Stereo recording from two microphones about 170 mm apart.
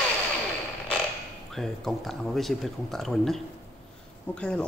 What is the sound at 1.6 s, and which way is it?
Speech, centre (ahead or behind).